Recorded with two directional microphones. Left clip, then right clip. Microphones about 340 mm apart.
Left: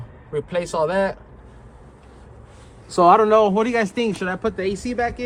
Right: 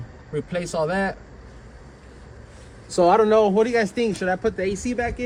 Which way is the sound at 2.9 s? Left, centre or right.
Centre.